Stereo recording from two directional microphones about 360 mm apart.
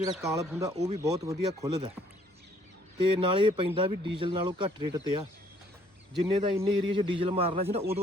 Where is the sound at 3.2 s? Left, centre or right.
Centre.